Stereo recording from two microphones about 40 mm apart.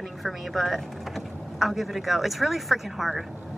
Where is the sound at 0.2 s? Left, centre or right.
Centre.